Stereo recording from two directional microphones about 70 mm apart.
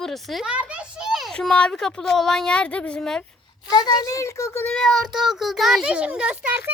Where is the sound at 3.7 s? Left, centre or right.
Left.